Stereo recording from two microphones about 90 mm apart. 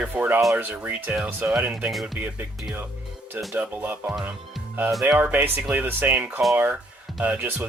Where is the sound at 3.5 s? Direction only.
20° right (ahead or behind).